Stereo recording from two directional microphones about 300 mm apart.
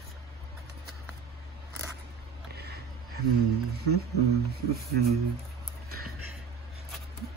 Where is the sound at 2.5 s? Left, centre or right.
Right.